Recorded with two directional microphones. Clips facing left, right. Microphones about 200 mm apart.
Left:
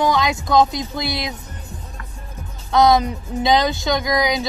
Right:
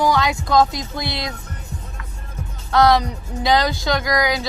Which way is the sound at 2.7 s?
20° left (ahead or behind).